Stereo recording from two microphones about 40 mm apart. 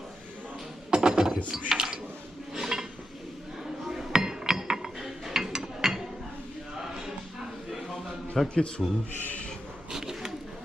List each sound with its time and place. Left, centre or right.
0.9 s a sound: right
2.5 s dishes: centre
8.4 s a man's voice: centre
9.9 s bird: centre